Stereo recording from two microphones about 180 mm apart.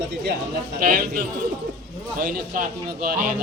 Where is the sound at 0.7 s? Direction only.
55° right (ahead or behind).